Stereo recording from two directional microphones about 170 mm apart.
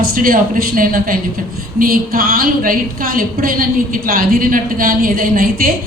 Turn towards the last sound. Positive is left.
turn(degrees=-55)  # may be behind; listen again after turning